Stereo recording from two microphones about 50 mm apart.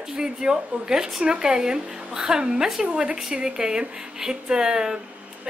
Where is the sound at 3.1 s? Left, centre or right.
Centre.